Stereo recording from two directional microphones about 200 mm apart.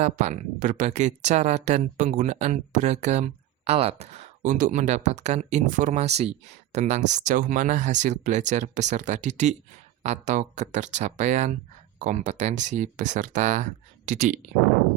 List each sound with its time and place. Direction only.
0.0 s speech: 35° right (ahead or behind)